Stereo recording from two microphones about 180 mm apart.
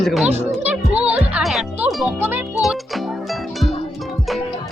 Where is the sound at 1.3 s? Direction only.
Centre (ahead or behind).